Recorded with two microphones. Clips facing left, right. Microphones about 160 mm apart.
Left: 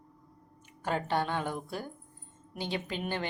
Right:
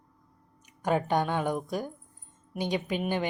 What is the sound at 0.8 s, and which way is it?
Speech, 15° right (ahead or behind).